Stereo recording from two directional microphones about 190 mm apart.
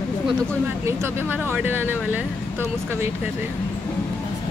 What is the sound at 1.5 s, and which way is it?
Speech, 10° right (ahead or behind).